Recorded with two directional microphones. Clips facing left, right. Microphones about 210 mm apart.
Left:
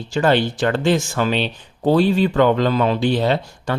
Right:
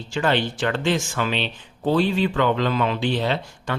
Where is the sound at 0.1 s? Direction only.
40° left (ahead or behind).